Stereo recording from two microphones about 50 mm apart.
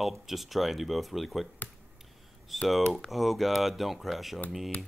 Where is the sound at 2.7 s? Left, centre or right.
Centre.